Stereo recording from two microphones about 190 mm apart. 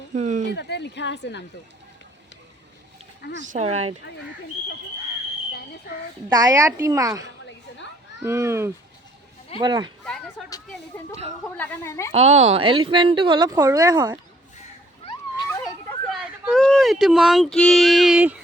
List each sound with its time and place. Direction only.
0.1 s speech: 40° right (ahead or behind)
0.5 s a woman's voice: 65° left (ahead or behind)
3.4 s speech: 40° right (ahead or behind)
6.2 s a woman's voice: 20° right (ahead or behind)
10.7 s a woman's voice: 10° left (ahead or behind)
12.3 s speech: 35° right (ahead or behind)
15.4 s speech: 5° left (ahead or behind)